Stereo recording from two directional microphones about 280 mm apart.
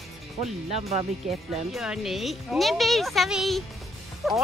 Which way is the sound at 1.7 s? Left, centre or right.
Centre.